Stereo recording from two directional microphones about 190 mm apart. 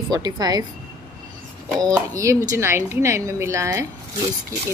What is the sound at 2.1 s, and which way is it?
A woman's voice, 15° right (ahead or behind).